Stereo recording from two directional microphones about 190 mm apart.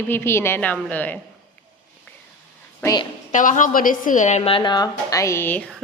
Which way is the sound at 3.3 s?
40° left (ahead or behind).